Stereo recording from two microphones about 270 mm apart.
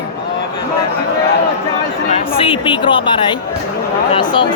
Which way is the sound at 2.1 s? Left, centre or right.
Centre.